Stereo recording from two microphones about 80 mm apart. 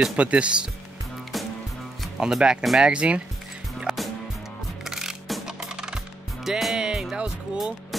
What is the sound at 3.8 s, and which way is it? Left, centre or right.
Music, centre.